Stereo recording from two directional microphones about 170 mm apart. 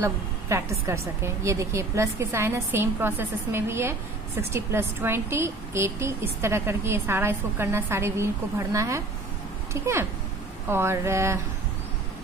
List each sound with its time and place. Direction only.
0.0 s a woman's voice: 15° right (ahead or behind)